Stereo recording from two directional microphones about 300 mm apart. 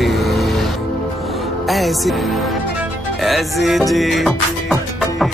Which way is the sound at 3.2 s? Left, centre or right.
Centre.